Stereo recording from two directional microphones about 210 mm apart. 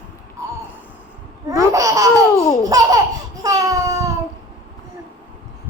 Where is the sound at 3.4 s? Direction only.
15° right (ahead or behind).